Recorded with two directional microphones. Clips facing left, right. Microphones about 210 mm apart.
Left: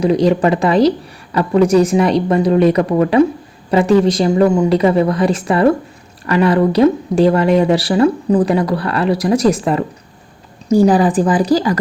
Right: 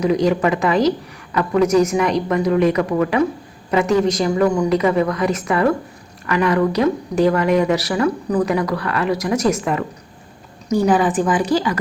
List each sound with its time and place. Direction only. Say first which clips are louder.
0.0 s speech: left 4 dB; 30° left (ahead or behind)